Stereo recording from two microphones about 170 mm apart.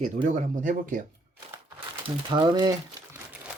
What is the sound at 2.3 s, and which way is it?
Speech, 25° right (ahead or behind).